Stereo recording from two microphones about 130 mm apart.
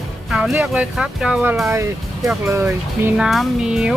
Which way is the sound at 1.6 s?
20° right (ahead or behind).